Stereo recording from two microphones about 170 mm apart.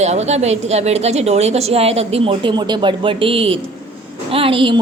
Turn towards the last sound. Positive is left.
turn(degrees=-30)  # may be behind; listen again after turning